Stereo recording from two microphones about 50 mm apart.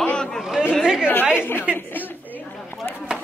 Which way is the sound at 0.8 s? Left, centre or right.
Centre.